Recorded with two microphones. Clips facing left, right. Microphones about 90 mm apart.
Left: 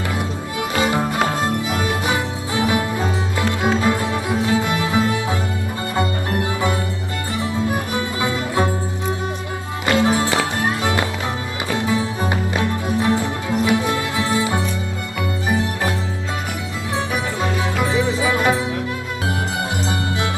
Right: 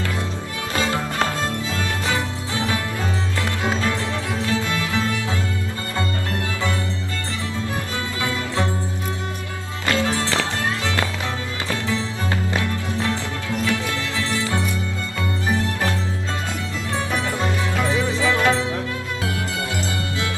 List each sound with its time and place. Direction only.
0.8 s music: 20° left (ahead or behind)
9.8 s music: 20° left (ahead or behind)
17.4 s music: 15° left (ahead or behind)